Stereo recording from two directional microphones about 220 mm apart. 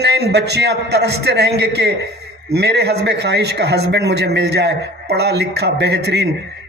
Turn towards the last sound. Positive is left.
turn(degrees=-50)  # may be behind; listen again after turning